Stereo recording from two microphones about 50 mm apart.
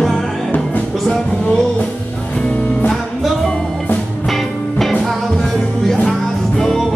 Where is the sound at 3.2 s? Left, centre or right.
Centre.